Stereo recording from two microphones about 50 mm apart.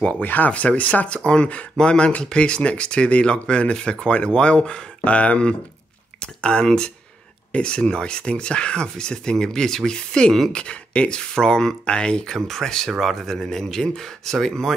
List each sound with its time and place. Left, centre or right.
0.2 s speech: left; by 12.2 s centre
12.4 s speech: centre